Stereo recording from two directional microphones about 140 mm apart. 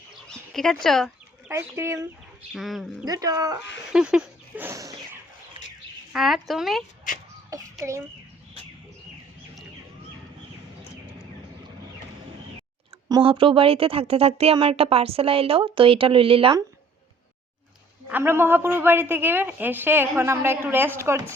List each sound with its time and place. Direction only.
0.3 s speech: 5° left (ahead or behind)
1.5 s speech: 20° right (ahead or behind)
2.5 s speech: centre (ahead or behind)
3.0 s speech: 25° right (ahead or behind)
3.9 s speech: 5° right (ahead or behind); by 5.2 s 25° right (ahead or behind)
6.1 s speech: centre (ahead or behind)
7.1 s a sound: 70° left (ahead or behind)
13.2 s speech: 40° right (ahead or behind)
18.1 s a woman's voice: 15° right (ahead or behind)